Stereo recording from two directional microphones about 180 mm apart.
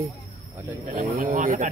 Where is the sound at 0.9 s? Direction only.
40° right (ahead or behind).